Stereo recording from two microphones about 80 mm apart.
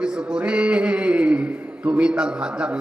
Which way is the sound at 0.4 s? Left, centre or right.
Centre.